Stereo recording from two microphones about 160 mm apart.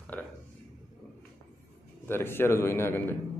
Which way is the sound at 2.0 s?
15° left (ahead or behind).